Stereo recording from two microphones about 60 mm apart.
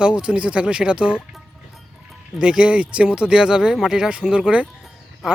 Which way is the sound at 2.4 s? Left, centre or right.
Centre.